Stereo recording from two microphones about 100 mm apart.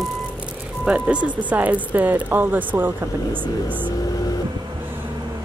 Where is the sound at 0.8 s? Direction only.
10° right (ahead or behind).